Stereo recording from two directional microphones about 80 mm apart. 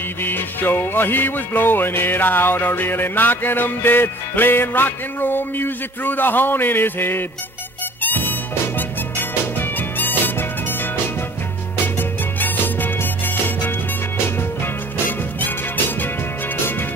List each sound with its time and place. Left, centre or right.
0.2 s music: left